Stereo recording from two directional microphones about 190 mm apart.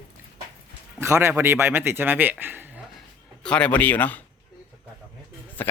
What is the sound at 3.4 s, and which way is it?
Speech, 5° left (ahead or behind).